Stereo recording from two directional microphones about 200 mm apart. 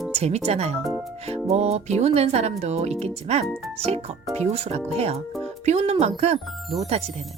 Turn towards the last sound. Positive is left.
turn(degrees=-30)  # may be behind; listen again after turning